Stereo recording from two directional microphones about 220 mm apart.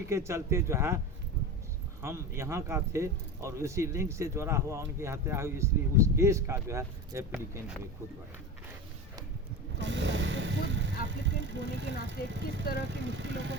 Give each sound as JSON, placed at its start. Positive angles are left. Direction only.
{"t": 0.1, "sound": "speech", "side_deg": -10}
{"t": 2.0, "sound": "speech", "side_deg": -10}
{"t": 9.7, "sound": "vehicle", "side_deg": -55}
{"t": 11.1, "sound": "speech", "side_deg": -55}